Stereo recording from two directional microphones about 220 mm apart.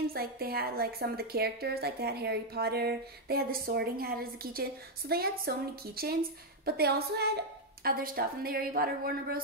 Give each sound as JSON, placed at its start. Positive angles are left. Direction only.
{"t": 0.1, "sound": "a woman's voice", "side_deg": -45}